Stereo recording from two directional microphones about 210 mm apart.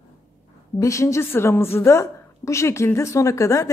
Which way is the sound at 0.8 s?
15° left (ahead or behind).